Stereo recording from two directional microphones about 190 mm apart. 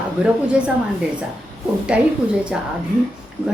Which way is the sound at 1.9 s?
5° right (ahead or behind).